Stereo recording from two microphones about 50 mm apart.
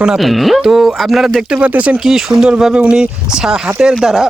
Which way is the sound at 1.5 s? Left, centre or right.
Right.